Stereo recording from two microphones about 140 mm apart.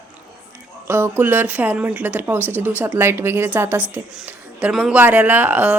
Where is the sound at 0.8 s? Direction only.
15° right (ahead or behind).